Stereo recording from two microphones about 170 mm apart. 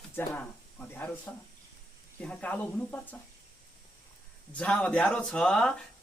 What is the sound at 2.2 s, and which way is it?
Speech, 5° left (ahead or behind).